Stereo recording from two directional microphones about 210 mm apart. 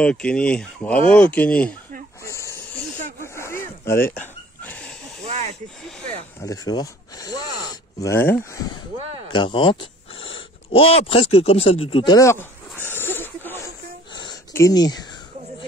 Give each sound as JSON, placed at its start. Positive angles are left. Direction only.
{"t": 0.0, "sound": "speech", "side_deg": 5}
{"t": 2.2, "sound": "a sound", "side_deg": 15}
{"t": 5.2, "sound": "snake", "side_deg": -30}
{"t": 6.4, "sound": "speech", "side_deg": 15}
{"t": 12.2, "sound": "speech", "side_deg": 15}
{"t": 12.9, "sound": "a sound", "side_deg": 10}